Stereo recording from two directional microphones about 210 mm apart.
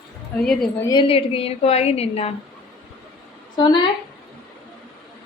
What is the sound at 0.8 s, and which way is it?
A woman's voice, 25° left (ahead or behind).